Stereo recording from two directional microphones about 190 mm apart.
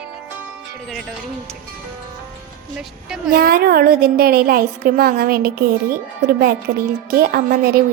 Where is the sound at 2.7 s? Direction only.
5° right (ahead or behind).